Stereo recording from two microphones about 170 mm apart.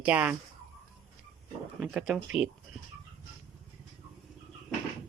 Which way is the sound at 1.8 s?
5° right (ahead or behind).